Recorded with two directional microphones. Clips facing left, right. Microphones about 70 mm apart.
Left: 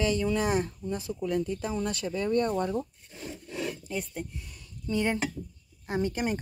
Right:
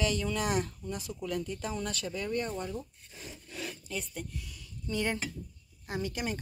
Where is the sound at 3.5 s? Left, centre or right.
Left.